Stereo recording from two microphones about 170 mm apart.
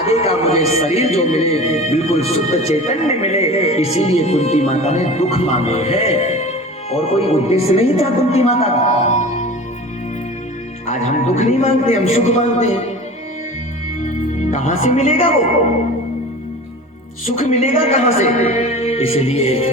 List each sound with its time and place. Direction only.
0.1 s a man's voice: 35° left (ahead or behind)
10.8 s a man's voice: 40° left (ahead or behind)
14.5 s a woman's voice: 40° left (ahead or behind)
17.2 s a man's voice: 45° left (ahead or behind)